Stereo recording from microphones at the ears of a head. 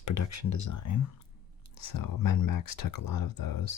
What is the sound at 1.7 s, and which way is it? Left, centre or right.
Speech, left.